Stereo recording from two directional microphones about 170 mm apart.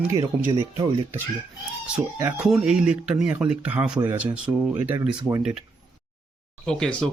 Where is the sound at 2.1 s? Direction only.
10° right (ahead or behind).